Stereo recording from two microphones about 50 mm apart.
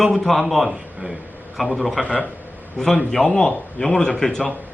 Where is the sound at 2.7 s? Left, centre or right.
Centre.